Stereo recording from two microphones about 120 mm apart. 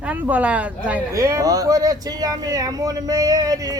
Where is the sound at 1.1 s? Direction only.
25° right (ahead or behind).